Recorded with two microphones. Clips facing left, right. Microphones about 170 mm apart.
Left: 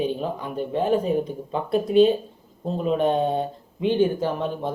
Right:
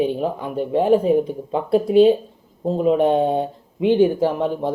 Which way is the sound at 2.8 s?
15° right (ahead or behind).